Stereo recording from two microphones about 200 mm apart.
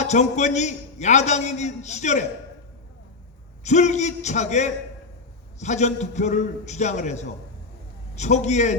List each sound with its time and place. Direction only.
0.0 s a man's voice: 35° left (ahead or behind)
3.6 s a man's voice: 35° left (ahead or behind)